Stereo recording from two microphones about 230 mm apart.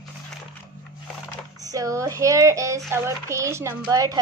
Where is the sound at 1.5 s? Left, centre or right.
Centre.